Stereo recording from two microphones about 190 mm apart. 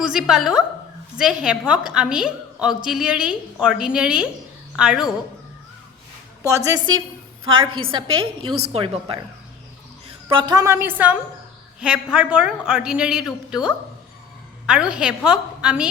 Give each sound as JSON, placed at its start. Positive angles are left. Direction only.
{"t": 0.0, "sound": "a woman's voice", "side_deg": -5}
{"t": 6.7, "sound": "a woman's voice", "side_deg": -20}
{"t": 10.2, "sound": "a woman's voice", "side_deg": -25}